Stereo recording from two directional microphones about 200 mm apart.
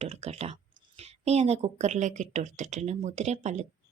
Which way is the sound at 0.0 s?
30° right (ahead or behind).